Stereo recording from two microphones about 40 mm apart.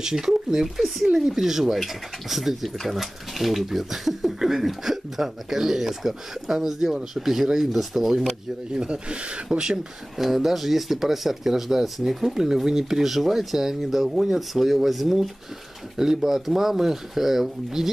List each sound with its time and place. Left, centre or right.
0.0 s speech: centre
8.7 s speech: right
10.1 s speech: centre